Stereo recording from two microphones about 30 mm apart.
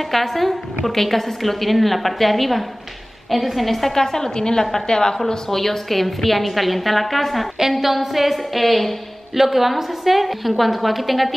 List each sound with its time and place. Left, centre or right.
0.1 s a woman's voice: centre; by 5.2 s left
5.3 s a woman's voice: centre
7.8 s a woman's voice: centre